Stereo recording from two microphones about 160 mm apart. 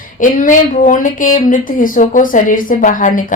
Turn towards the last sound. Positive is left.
turn(degrees=55)  # may be behind; listen again after turning